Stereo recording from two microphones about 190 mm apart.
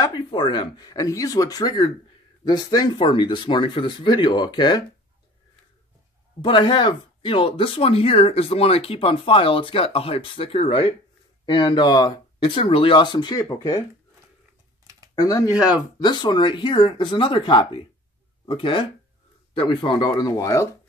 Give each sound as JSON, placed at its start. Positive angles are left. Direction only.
{"t": 0.0, "sound": "speech", "side_deg": 25}
{"t": 6.4, "sound": "speech", "side_deg": 25}
{"t": 15.1, "sound": "speech", "side_deg": 20}
{"t": 15.5, "sound": "speech", "side_deg": -5}
{"t": 16.0, "sound": "speech", "side_deg": 25}